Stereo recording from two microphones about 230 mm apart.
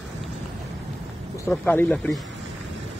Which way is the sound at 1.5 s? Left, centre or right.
Centre.